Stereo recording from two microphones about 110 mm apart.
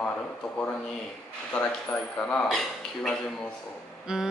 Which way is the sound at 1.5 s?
10° left (ahead or behind).